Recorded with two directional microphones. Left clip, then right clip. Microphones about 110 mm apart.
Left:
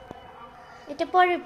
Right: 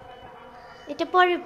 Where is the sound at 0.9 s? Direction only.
45° right (ahead or behind).